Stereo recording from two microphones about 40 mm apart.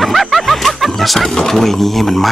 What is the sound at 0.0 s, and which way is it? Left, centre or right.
Music, centre.